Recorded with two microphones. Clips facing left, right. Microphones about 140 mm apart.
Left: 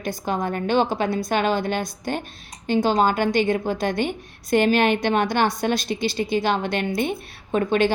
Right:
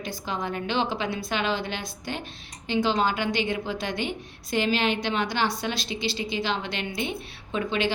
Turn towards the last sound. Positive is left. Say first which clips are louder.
# left 7 dB
turn(degrees=50)  # may be behind; listen again after turning